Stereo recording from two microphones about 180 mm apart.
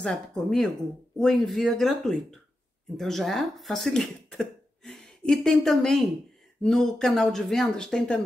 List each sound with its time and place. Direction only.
0.0 s speech: 5° left (ahead or behind)